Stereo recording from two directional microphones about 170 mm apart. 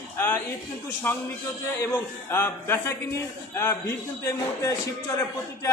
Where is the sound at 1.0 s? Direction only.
10° left (ahead or behind).